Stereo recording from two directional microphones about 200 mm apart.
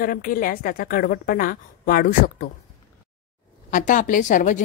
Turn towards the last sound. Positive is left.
turn(degrees=40)  # may be behind; listen again after turning